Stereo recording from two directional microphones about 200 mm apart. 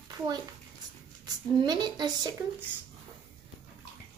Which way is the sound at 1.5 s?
20° right (ahead or behind).